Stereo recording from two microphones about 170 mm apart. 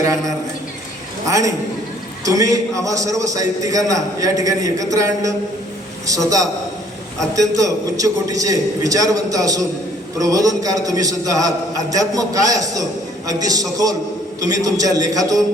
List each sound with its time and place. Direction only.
1.3 s a man's voice: 20° right (ahead or behind)